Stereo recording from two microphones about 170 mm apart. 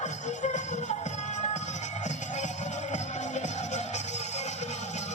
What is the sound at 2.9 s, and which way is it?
Music, 45° left (ahead or behind).